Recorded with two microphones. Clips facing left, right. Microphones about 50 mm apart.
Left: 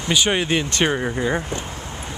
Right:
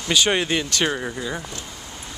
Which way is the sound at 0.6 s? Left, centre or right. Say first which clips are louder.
Left 2 dB; left.